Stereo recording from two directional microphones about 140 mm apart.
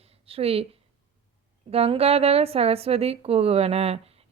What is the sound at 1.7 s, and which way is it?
Speech, 45° right (ahead or behind).